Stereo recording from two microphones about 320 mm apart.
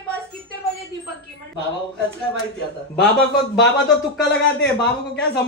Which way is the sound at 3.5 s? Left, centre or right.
Left.